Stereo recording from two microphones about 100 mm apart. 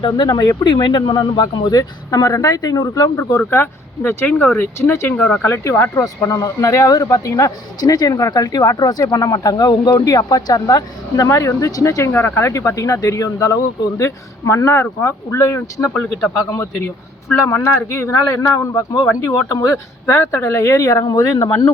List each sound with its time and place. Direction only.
0.0 s speech: 45° left (ahead or behind); by 5.9 s 25° left (ahead or behind)
6.2 s speech: 35° left (ahead or behind)
15.9 s a man's voice: 15° left (ahead or behind)
17.3 s speech: 25° left (ahead or behind)